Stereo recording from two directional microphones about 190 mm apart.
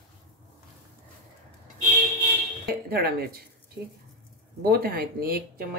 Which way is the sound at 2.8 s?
50° right (ahead or behind).